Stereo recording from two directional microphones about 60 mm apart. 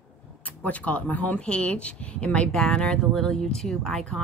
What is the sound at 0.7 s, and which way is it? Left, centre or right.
A woman's voice, left.